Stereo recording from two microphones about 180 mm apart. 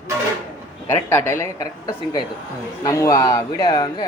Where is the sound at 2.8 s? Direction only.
20° left (ahead or behind).